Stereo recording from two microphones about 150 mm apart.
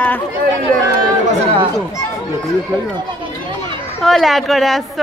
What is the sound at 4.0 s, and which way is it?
A woman's voice, centre (ahead or behind).